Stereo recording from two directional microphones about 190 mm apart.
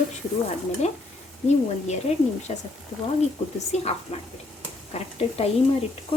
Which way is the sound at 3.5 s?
35° left (ahead or behind).